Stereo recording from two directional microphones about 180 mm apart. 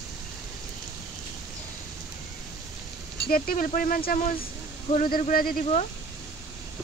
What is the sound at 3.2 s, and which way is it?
Speech, 55° left (ahead or behind).